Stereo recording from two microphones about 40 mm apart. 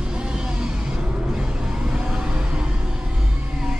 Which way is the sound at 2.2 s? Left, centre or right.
Right.